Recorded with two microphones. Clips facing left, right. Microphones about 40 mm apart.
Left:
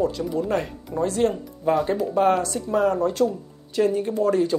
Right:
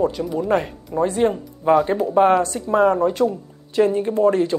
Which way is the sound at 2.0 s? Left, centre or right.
Right.